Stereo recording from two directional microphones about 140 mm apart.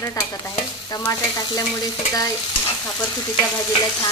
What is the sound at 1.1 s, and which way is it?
Stir, 25° left (ahead or behind).